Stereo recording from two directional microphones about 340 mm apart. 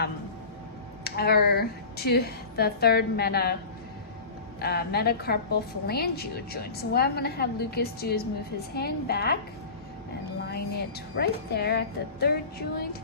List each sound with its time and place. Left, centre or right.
1.0 s a woman's voice: left
4.6 s a woman's voice: left
10.5 s a woman's voice: left